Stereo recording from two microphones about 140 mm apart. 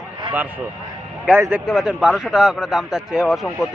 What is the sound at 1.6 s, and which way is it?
Speech, centre (ahead or behind).